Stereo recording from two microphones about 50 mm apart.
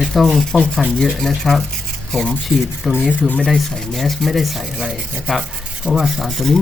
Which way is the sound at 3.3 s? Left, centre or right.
Left.